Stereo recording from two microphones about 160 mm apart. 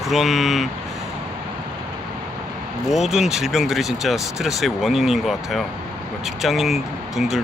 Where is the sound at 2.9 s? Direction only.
Centre (ahead or behind).